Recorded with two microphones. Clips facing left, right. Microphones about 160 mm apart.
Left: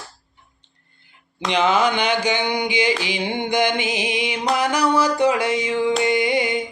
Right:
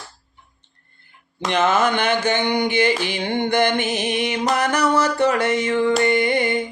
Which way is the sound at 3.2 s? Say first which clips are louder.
Right 2 dB; 10° left (ahead or behind).